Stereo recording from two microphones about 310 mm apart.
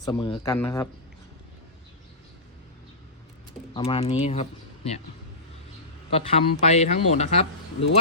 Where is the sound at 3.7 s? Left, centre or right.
Centre.